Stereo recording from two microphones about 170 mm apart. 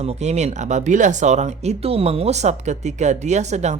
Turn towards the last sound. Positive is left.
turn(degrees=-40)  # may be behind; listen again after turning